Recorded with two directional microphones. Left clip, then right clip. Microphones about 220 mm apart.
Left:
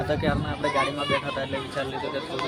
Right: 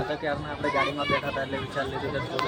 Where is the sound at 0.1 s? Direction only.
40° left (ahead or behind).